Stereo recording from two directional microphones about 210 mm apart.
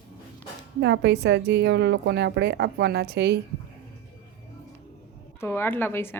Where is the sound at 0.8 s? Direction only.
55° right (ahead or behind).